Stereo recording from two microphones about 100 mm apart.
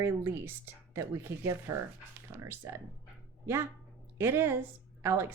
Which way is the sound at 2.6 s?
30° right (ahead or behind).